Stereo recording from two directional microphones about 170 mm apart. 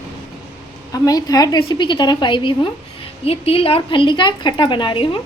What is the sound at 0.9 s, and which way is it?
A woman's voice, 20° left (ahead or behind).